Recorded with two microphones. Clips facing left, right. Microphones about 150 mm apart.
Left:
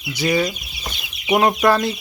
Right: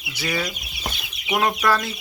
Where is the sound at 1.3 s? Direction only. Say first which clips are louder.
Left 5 dB; 25° left (ahead or behind).